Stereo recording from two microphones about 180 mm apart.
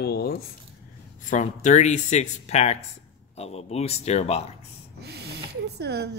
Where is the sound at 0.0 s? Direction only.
60° left (ahead or behind).